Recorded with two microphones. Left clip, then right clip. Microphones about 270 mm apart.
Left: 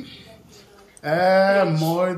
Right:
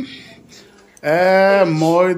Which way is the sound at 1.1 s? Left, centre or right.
Right.